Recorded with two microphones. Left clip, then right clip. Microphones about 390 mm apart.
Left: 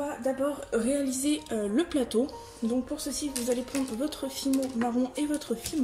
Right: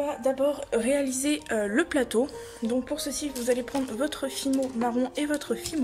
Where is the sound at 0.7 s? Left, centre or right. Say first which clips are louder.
Right 3 dB; right.